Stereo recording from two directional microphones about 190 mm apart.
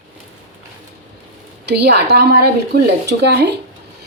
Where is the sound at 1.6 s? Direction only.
60° right (ahead or behind).